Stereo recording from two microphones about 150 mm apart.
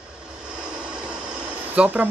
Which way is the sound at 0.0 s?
5° right (ahead or behind).